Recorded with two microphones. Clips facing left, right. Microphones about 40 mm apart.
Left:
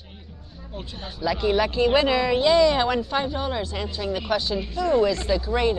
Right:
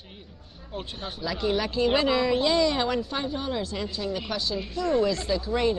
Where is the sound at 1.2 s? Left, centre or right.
Centre.